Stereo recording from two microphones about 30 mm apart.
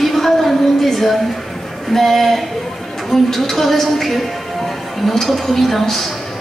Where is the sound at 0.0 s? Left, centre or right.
Centre.